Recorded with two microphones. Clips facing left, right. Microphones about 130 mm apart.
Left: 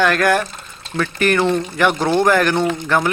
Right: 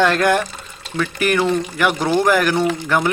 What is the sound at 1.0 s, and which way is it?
Speech, 5° right (ahead or behind).